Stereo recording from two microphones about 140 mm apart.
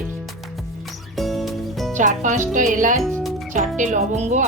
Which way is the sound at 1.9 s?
65° right (ahead or behind).